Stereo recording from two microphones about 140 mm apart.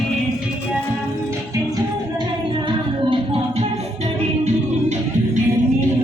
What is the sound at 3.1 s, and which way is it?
Music, 40° right (ahead or behind).